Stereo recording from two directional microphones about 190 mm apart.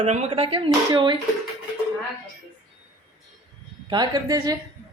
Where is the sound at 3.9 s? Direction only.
20° right (ahead or behind).